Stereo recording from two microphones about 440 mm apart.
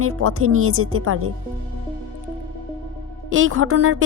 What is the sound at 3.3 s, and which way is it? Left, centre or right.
Speech, right.